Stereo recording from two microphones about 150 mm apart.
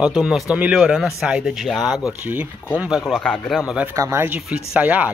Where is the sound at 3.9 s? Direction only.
20° right (ahead or behind).